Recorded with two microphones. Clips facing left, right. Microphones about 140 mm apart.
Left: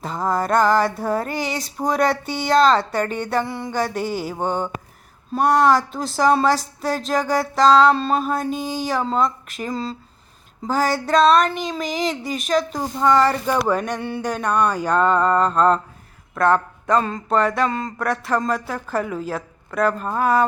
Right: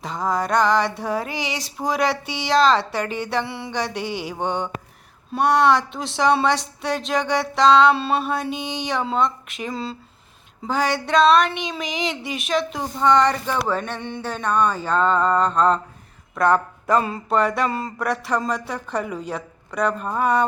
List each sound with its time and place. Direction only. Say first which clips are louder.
0.0 s speech: left 1 dB; centre (ahead or behind)
4.0 s mantra: left 3 dB; 45° left (ahead or behind)
4.3 s speech: left 2 dB; centre (ahead or behind)
8.4 s mantra: left 3 dB; 40° left (ahead or behind)
8.7 s speech: left 1 dB; centre (ahead or behind)